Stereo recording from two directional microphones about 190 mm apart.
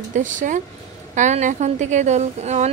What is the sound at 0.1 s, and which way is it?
A woman's voice, 40° right (ahead or behind).